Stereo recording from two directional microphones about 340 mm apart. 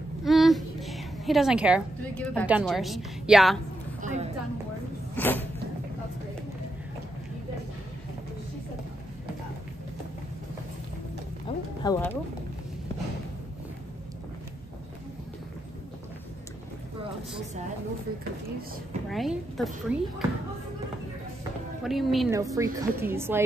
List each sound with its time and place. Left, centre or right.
0.2 s a woman's voice: centre
4.0 s a woman's voice: centre
5.1 s a sound: centre
11.4 s a sound: centre
19.0 s speech: centre
21.8 s a woman's voice: centre